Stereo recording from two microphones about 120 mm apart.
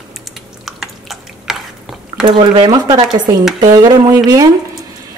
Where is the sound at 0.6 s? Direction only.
Centre (ahead or behind).